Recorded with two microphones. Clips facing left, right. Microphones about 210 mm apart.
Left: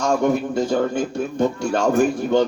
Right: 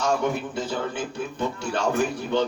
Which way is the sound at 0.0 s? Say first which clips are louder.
Left 5 dB; 45° left (ahead or behind).